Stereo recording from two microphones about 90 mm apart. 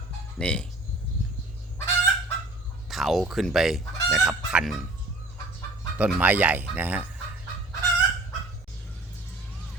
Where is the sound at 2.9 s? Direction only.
Centre (ahead or behind).